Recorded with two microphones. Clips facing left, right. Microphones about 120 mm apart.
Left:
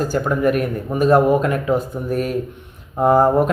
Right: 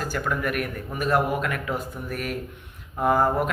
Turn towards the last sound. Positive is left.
turn(degrees=30)  # may be behind; listen again after turning